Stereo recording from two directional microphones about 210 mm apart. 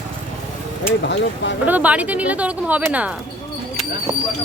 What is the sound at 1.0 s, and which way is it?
Speech, 55° left (ahead or behind).